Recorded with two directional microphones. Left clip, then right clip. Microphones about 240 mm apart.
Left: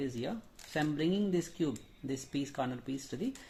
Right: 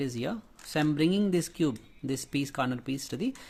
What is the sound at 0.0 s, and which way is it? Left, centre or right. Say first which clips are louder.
Speech: right 5 dB; right.